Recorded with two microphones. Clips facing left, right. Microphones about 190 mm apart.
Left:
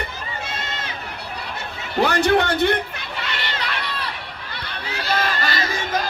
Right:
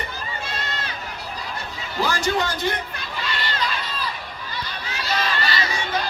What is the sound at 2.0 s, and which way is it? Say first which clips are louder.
Chatter: left 5 dB; 65° left (ahead or behind).